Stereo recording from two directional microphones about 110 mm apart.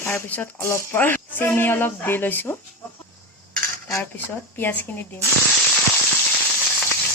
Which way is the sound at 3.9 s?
15° left (ahead or behind).